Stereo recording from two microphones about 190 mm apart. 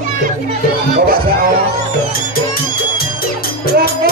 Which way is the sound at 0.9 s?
50° right (ahead or behind).